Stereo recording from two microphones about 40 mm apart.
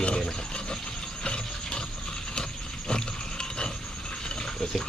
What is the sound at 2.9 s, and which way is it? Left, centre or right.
Pig, left.